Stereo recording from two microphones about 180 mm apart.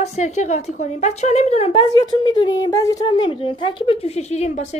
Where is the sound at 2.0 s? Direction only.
25° left (ahead or behind).